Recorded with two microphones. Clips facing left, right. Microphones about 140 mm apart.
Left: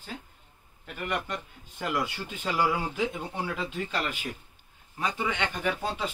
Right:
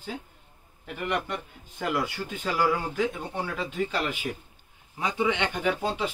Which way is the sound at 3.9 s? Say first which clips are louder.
Right 3 dB; 10° right (ahead or behind).